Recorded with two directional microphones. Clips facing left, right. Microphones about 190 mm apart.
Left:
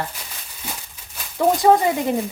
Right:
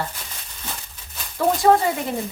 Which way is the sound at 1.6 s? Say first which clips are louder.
Left 1 dB; 15° left (ahead or behind).